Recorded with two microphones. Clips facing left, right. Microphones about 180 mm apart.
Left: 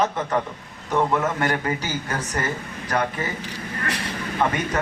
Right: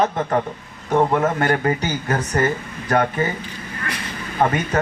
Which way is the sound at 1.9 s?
50° right (ahead or behind).